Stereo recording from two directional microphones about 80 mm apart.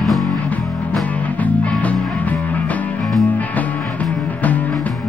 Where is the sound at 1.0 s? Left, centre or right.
Centre.